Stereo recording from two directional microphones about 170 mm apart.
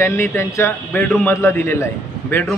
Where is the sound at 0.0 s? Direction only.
15° left (ahead or behind).